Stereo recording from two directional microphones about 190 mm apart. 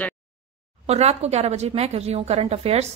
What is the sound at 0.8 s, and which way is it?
A woman's voice, 35° right (ahead or behind).